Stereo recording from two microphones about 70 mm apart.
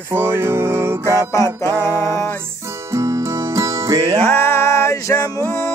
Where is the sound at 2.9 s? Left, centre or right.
Right.